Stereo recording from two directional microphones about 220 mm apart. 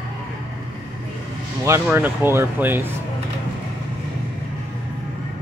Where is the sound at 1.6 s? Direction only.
10° right (ahead or behind).